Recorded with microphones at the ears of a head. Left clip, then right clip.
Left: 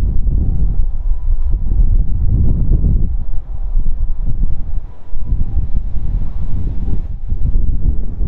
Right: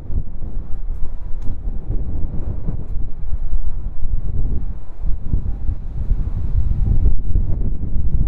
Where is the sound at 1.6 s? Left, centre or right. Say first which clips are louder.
Left 4 dB; left.